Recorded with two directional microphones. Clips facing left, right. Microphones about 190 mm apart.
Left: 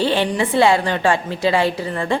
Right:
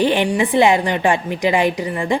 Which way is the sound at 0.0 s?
15° right (ahead or behind).